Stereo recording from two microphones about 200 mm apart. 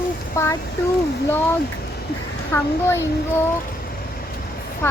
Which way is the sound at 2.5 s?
10° left (ahead or behind).